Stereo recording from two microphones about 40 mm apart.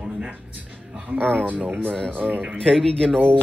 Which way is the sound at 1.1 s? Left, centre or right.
Right.